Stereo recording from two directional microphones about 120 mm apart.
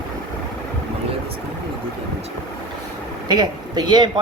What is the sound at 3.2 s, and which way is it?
Speech, 40° right (ahead or behind).